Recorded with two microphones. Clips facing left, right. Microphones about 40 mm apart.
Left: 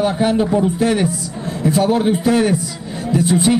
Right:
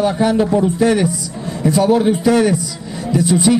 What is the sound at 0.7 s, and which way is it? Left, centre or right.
Speech, left.